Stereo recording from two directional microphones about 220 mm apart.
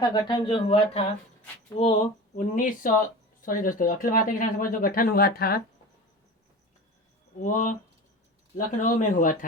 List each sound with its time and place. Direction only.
0.1 s speech: 20° left (ahead or behind); by 5.6 s 45° left (ahead or behind)
7.4 s speech: 35° left (ahead or behind)